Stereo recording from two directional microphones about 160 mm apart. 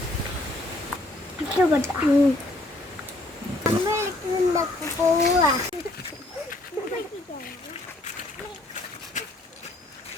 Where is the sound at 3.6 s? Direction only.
20° right (ahead or behind).